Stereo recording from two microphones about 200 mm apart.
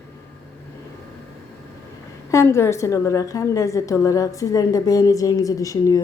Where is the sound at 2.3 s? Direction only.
15° left (ahead or behind).